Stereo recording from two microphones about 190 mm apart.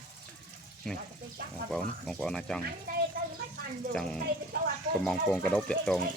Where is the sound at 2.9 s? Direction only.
50° right (ahead or behind).